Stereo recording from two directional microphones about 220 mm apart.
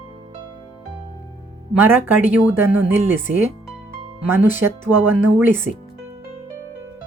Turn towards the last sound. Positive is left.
turn(degrees=-10)  # may be behind; listen again after turning